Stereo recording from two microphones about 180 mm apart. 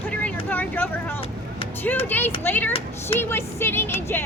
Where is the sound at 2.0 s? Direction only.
10° left (ahead or behind).